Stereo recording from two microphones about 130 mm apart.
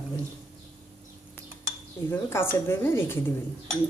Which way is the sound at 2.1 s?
15° left (ahead or behind).